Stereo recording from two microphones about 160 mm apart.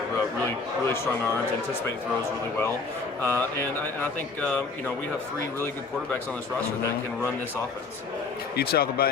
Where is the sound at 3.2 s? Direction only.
15° left (ahead or behind).